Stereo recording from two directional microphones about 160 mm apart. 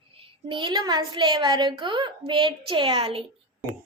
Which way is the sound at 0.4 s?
30° right (ahead or behind).